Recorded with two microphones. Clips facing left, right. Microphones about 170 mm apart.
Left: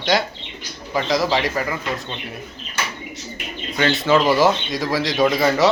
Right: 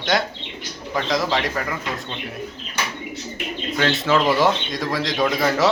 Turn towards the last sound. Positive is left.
turn(degrees=0)  # may be behind; listen again after turning